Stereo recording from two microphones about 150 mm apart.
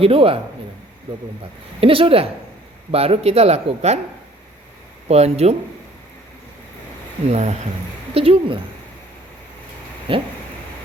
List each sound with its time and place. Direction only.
0.0 s speech: 40° right (ahead or behind)
1.4 s speech: 40° right (ahead or behind)
5.0 s speech: 45° right (ahead or behind)
7.3 s speech: 50° right (ahead or behind)
10.1 s speech: 35° right (ahead or behind)